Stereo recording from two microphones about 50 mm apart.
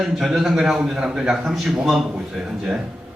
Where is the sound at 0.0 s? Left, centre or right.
Centre.